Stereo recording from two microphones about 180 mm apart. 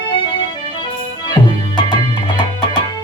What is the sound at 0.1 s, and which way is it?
Music, 30° left (ahead or behind).